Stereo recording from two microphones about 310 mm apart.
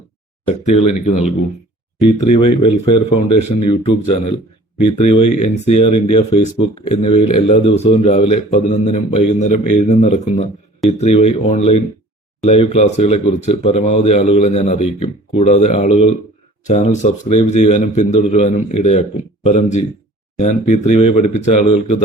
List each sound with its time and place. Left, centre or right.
0.4 s a man's voice: left
2.2 s speech: left
2.6 s a man's voice: centre